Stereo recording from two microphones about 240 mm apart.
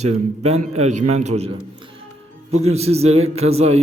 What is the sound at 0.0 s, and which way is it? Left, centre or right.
A man's voice, right.